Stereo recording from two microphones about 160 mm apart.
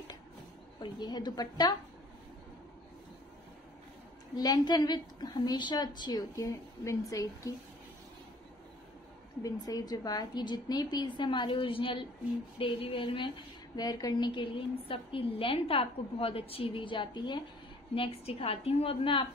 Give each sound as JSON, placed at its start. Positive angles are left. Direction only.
{"t": 0.7, "sound": "a woman's voice", "side_deg": 25}
{"t": 4.4, "sound": "a woman's voice", "side_deg": 25}
{"t": 9.4, "sound": "a woman's voice", "side_deg": 25}